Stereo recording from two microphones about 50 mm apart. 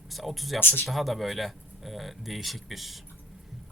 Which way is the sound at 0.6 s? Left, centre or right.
Left.